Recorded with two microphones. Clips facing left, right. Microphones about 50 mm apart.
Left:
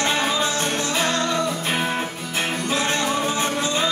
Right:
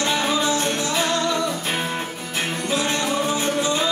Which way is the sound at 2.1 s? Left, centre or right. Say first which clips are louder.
Left 1 dB; centre.